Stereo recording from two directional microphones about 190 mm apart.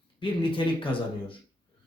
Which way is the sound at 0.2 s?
25° left (ahead or behind).